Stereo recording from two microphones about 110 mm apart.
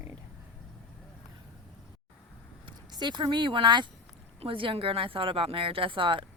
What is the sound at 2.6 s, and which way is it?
Speech, 40° right (ahead or behind).